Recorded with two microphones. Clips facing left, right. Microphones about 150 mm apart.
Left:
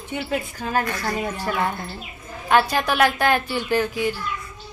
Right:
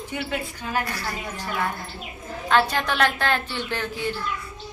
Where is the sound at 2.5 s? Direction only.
10° left (ahead or behind).